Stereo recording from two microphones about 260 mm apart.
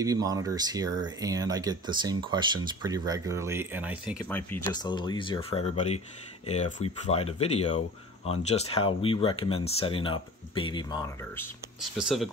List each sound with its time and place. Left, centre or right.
0.0 s speech: centre
4.3 s speech: centre
12.0 s speech: centre